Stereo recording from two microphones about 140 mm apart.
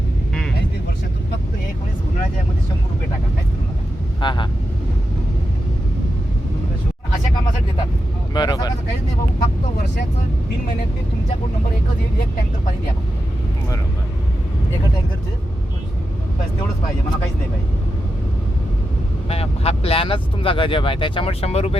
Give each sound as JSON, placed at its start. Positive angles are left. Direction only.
{"t": 4.2, "sound": "vehicle", "side_deg": 35}
{"t": 8.3, "sound": "vehicle", "side_deg": 30}
{"t": 19.3, "sound": "vehicle", "side_deg": 45}